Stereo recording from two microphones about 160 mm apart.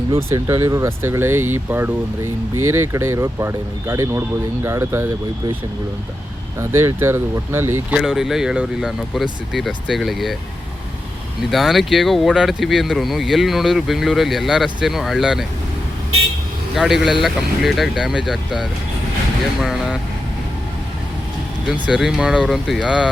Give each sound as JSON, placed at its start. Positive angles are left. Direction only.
{"t": 0.2, "sound": "speech", "side_deg": -20}
{"t": 6.6, "sound": "speech", "side_deg": -15}
{"t": 11.5, "sound": "speech", "side_deg": 0}
{"t": 16.7, "sound": "speech", "side_deg": 0}
{"t": 21.7, "sound": "speech", "side_deg": -5}